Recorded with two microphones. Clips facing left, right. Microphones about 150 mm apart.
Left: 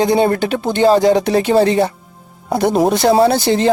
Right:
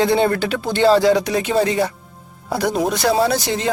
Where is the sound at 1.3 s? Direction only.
35° left (ahead or behind).